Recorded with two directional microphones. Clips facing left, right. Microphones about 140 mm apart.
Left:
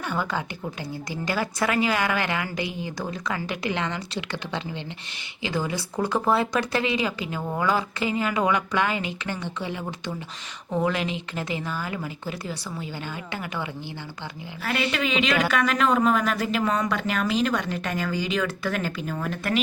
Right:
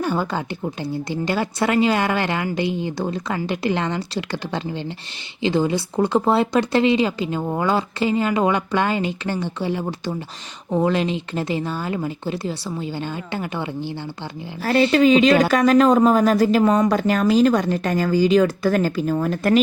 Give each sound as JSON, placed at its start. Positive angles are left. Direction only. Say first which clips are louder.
{"t": 0.0, "sound": "speech", "louder": "right 5 dB", "side_deg": -35}
{"t": 5.4, "sound": "speech", "louder": "right 8 dB", "side_deg": -25}